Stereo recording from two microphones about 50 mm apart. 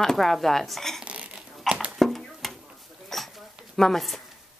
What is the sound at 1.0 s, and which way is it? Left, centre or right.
Cough, right.